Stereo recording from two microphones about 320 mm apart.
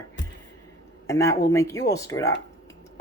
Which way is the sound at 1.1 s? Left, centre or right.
Centre.